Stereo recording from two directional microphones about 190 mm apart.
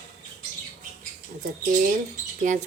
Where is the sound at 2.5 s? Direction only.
40° right (ahead or behind).